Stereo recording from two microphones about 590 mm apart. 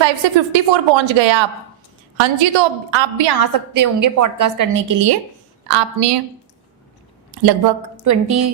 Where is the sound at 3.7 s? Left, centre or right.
Right.